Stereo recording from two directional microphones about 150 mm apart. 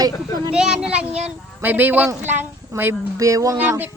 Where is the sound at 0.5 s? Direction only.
5° right (ahead or behind).